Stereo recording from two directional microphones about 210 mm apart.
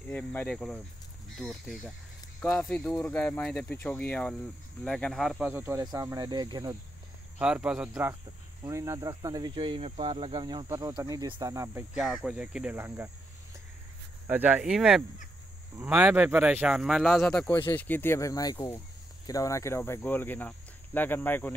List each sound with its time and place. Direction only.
0.1 s speech: 5° left (ahead or behind); by 6.8 s 20° right (ahead or behind)
7.3 s speech: 5° right (ahead or behind)
8.6 s cricket: 15° right (ahead or behind)
12.0 s speech: centre (ahead or behind)
14.2 s speech: 10° right (ahead or behind); by 21.5 s 10° left (ahead or behind)